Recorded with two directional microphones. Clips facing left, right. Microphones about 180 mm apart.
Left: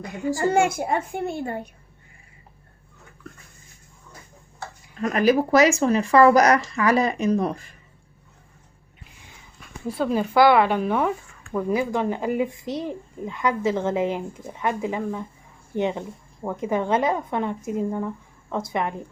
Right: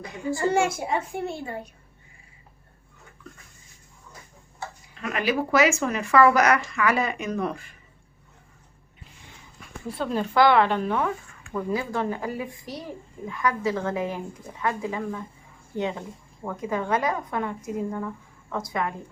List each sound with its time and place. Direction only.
0.3 s a child's voice: 55° left (ahead or behind)
4.9 s speech: 40° left (ahead or behind)
10.0 s a woman's voice: 5° left (ahead or behind); by 18.9 s 25° left (ahead or behind)